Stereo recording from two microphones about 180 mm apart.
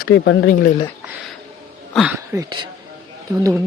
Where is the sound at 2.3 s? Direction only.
25° right (ahead or behind).